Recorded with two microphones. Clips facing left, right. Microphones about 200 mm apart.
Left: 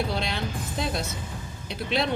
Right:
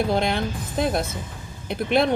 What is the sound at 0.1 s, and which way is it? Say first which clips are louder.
Speech: right 7 dB; 55° right (ahead or behind).